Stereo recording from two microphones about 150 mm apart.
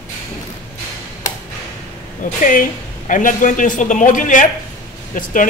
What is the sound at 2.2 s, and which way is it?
A man's voice, 60° left (ahead or behind).